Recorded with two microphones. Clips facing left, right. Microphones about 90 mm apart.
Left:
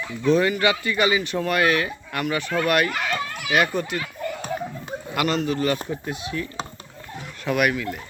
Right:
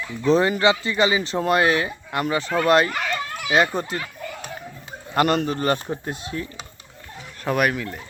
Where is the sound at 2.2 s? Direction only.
30° right (ahead or behind).